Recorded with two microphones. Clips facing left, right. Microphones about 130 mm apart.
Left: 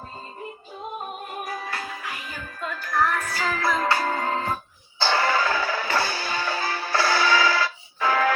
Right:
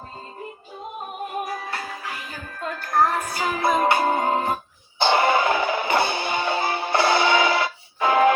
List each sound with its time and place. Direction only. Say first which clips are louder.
2.6 s music: right 3 dB; 45° right (ahead or behind)
3.2 s music: right 2 dB; 20° right (ahead or behind)